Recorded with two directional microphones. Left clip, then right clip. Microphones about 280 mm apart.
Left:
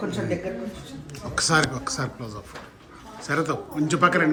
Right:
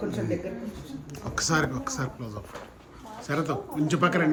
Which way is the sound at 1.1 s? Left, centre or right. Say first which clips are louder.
Left 5 dB; centre.